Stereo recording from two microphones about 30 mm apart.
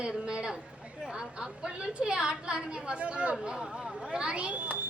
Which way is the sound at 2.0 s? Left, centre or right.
Right.